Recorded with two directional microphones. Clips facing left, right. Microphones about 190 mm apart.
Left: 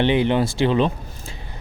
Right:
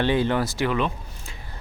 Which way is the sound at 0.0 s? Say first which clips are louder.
Left 4 dB; 20° left (ahead or behind).